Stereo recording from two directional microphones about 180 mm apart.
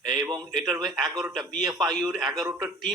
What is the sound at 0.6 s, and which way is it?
Speech, 20° right (ahead or behind).